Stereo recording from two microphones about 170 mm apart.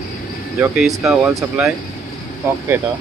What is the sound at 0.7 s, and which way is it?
Speech, centre (ahead or behind).